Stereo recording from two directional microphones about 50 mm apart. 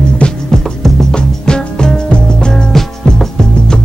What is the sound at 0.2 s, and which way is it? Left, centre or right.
Music, left.